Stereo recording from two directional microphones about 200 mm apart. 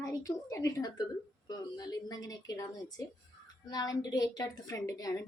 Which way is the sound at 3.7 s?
20° left (ahead or behind).